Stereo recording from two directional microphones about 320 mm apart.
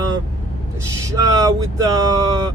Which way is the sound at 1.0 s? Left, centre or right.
Centre.